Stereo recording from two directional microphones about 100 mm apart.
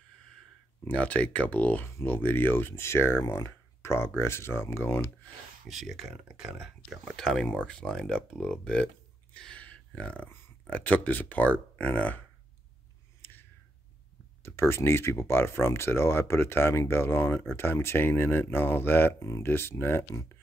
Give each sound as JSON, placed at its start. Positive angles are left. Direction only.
{"t": 0.8, "sound": "speech", "side_deg": 15}
{"t": 5.7, "sound": "speech", "side_deg": 0}
{"t": 13.2, "sound": "a sound", "side_deg": 20}
{"t": 14.4, "sound": "speech", "side_deg": 25}